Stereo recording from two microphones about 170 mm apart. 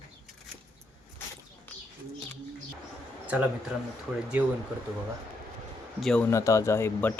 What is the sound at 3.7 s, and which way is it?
Speech, 5° right (ahead or behind).